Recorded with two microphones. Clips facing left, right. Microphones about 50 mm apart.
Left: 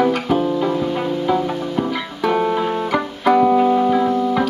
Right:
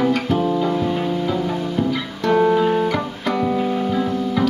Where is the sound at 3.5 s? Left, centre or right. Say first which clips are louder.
Left 6 dB; left.